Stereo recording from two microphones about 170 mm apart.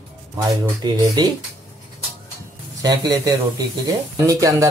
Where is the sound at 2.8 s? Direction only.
20° right (ahead or behind).